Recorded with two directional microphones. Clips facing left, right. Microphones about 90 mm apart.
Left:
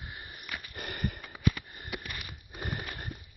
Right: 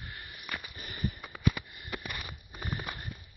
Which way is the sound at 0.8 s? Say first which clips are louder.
Left 3 dB; 65° left (ahead or behind).